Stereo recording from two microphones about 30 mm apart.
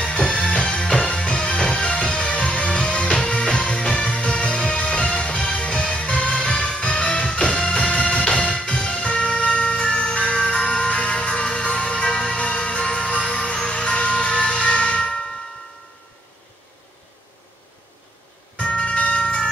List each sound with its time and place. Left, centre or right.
0.1 s music: left
12.4 s music: left
13.3 s vehicle: left
18.6 s music: left